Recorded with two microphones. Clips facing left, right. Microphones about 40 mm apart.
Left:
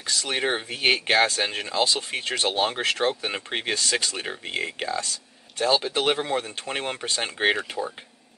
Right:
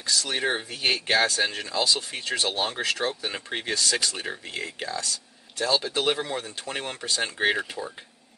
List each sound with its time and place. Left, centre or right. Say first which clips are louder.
0.0 s speech: left 1 dB; left